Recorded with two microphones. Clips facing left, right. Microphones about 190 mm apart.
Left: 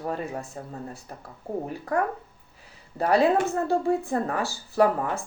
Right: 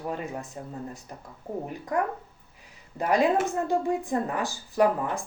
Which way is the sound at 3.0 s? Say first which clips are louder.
Left 2 dB; 15° right (ahead or behind).